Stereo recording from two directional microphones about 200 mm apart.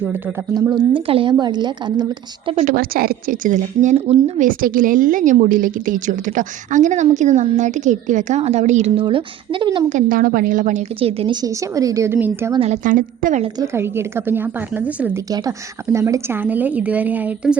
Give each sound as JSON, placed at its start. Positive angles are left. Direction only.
{"t": 0.1, "sound": "a woman's voice", "side_deg": -10}
{"t": 0.5, "sound": "a woman's voice", "side_deg": -20}
{"t": 2.6, "sound": "a woman's voice", "side_deg": -45}
{"t": 9.0, "sound": "a woman's voice", "side_deg": -25}
{"t": 9.9, "sound": "a woman's voice", "side_deg": -45}
{"t": 12.5, "sound": "a woman's voice", "side_deg": -35}
{"t": 13.7, "sound": "a woman's voice", "side_deg": -10}
{"t": 15.3, "sound": "a woman's voice", "side_deg": -20}